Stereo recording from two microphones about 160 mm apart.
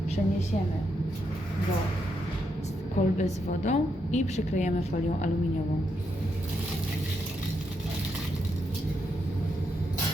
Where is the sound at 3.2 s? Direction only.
45° left (ahead or behind).